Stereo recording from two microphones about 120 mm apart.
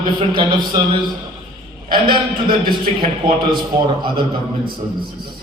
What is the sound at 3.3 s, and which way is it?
Music, 40° right (ahead or behind).